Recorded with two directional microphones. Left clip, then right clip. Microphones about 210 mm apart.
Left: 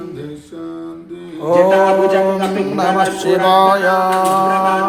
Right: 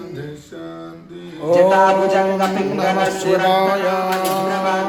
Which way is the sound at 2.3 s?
10° left (ahead or behind).